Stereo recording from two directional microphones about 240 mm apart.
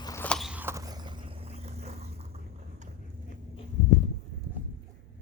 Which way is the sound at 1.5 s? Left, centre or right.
Right.